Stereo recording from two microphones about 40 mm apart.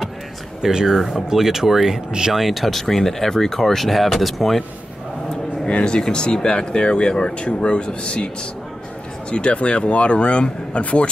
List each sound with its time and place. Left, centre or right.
0.6 s speech: centre
5.3 s speech: left
9.3 s speech: left